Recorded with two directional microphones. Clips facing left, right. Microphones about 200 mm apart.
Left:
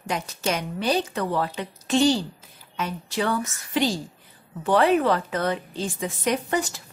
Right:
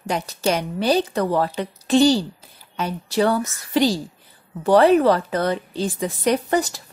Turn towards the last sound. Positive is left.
turn(degrees=-35)  # may be behind; listen again after turning